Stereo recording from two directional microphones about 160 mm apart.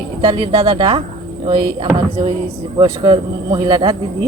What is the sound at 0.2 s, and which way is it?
Speech, 30° right (ahead or behind).